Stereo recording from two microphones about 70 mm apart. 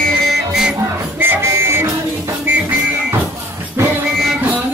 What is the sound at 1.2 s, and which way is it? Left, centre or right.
Music, right.